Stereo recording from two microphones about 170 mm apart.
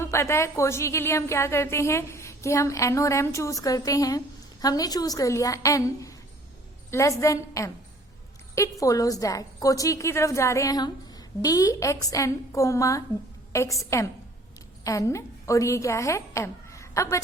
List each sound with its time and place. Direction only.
0.0 s a woman's voice: 15° left (ahead or behind)
8.8 s a woman's voice: 20° left (ahead or behind)
14.8 s a woman's voice: 20° left (ahead or behind)